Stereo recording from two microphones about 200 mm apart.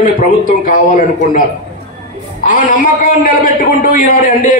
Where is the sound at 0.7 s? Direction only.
40° left (ahead or behind).